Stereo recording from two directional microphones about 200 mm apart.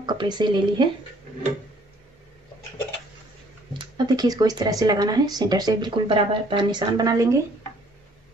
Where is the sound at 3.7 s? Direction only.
20° right (ahead or behind).